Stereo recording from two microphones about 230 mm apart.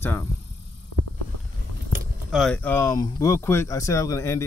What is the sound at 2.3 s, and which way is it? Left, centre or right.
Speech, centre.